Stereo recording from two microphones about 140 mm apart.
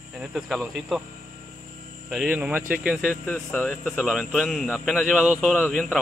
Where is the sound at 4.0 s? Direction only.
5° right (ahead or behind).